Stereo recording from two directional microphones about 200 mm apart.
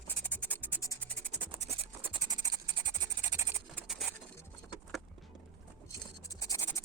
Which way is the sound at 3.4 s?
15° right (ahead or behind).